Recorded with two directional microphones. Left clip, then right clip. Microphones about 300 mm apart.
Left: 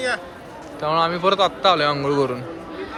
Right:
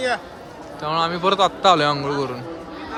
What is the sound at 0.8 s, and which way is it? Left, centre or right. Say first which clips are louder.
Speech: left 2 dB; centre.